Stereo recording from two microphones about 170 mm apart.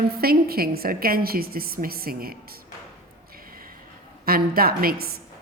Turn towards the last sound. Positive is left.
turn(degrees=-65)  # may be behind; listen again after turning